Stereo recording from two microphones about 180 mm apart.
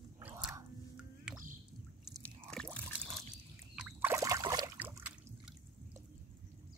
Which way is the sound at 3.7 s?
5° right (ahead or behind).